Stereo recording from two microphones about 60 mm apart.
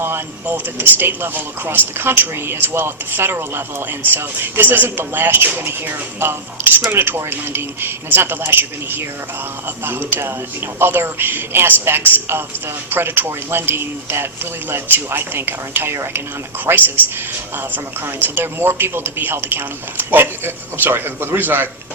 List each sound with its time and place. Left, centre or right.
0.0 s speech: right
18.0 s speech: right